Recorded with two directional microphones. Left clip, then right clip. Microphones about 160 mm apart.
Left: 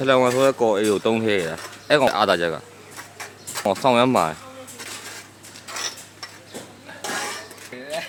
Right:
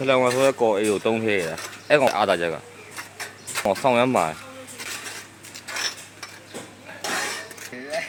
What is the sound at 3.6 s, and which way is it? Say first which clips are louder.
Speech: left 2 dB; 30° left (ahead or behind).